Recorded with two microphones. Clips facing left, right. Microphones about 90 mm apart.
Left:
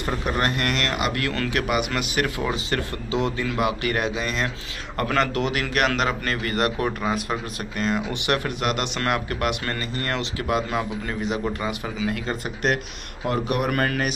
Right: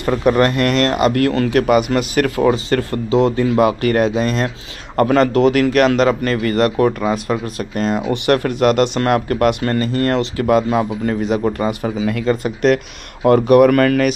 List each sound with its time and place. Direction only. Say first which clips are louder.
0.4 s a man's voice: right 10 dB; 45° right (ahead or behind)
12.7 s speech: right 8 dB; 75° right (ahead or behind)